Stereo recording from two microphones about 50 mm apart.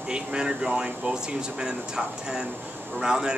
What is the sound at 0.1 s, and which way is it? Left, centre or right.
Speech, centre.